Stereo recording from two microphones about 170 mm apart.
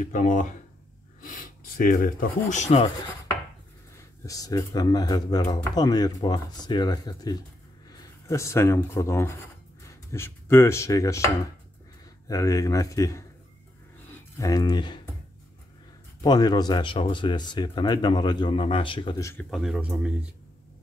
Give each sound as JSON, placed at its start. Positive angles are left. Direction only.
{"t": 0.0, "sound": "speech", "side_deg": 50}
{"t": 4.3, "sound": "speech", "side_deg": 20}
{"t": 9.8, "sound": "chopping", "side_deg": 15}
{"t": 12.3, "sound": "speech", "side_deg": 20}
{"t": 16.2, "sound": "speech", "side_deg": 25}
{"t": 19.5, "sound": "speech", "side_deg": 0}